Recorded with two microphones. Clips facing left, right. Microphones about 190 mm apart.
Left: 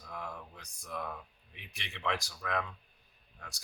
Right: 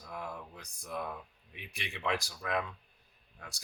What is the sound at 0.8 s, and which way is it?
Speech, 25° right (ahead or behind).